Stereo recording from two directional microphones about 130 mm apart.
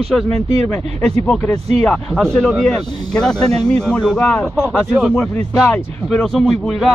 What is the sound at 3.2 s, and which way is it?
Speech, 5° left (ahead or behind).